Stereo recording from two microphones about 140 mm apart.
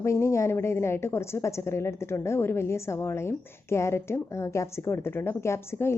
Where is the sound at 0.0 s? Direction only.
20° left (ahead or behind).